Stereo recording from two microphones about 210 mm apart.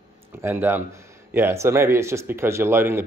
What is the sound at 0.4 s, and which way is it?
Speech, 10° right (ahead or behind).